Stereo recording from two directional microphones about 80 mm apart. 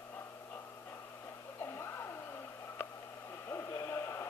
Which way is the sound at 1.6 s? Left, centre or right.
Left.